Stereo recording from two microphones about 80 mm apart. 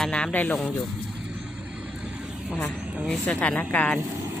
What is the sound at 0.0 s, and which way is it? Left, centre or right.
Speech, centre.